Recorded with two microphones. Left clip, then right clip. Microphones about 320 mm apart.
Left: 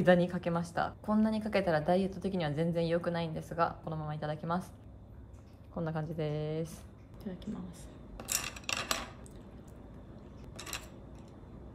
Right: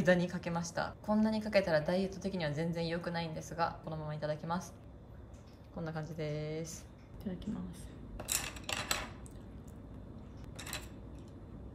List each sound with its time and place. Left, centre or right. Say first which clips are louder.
0.0 s a woman's voice: left 4 dB; centre
5.8 s a woman's voice: left 4 dB; centre
8.3 s a sound: left 2 dB; centre